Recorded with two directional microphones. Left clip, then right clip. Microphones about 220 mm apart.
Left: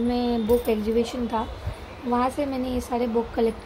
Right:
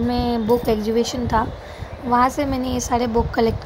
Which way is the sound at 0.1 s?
10° right (ahead or behind).